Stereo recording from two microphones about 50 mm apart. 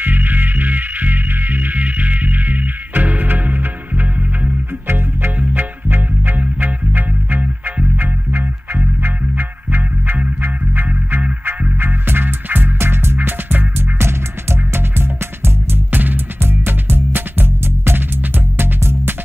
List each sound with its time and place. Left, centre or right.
0.0 s music: right
4.8 s music: right
5.4 s music: right
16.3 s music: right